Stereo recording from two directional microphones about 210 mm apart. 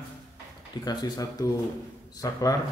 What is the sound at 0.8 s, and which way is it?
Speech, 20° left (ahead or behind).